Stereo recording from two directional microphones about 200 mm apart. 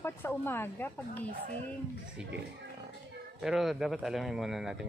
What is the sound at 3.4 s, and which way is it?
Speech, centre (ahead or behind).